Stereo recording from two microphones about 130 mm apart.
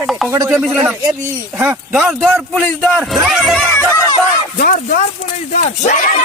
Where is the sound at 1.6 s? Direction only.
5° right (ahead or behind).